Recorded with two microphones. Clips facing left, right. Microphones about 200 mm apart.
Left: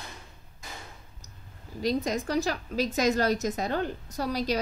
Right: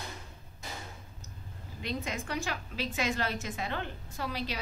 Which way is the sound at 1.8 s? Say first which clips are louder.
Left 9 dB; 40° left (ahead or behind).